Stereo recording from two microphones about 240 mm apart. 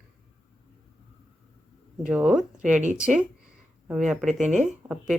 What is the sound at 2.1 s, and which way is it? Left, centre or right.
Speech, centre.